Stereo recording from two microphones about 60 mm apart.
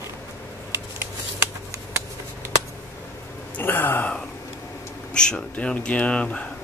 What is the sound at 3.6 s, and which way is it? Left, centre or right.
Speech, left.